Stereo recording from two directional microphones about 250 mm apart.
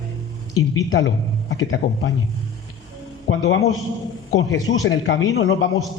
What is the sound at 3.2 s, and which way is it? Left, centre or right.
Speech, left.